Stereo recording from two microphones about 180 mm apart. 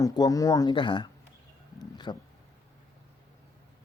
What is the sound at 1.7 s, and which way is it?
Roaring cats, 25° left (ahead or behind).